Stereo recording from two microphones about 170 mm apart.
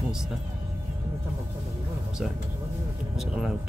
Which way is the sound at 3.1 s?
Centre (ahead or behind).